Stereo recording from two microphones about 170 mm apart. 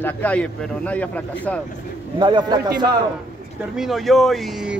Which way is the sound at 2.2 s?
30° right (ahead or behind).